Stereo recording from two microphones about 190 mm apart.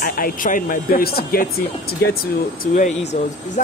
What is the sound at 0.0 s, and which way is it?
Speech, 50° left (ahead or behind).